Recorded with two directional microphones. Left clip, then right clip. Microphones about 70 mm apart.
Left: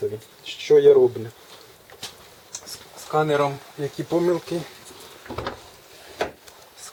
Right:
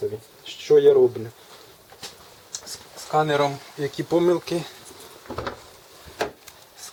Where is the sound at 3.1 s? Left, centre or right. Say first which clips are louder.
Even; right.